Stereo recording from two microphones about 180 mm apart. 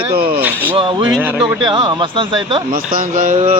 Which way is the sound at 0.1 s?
60° right (ahead or behind).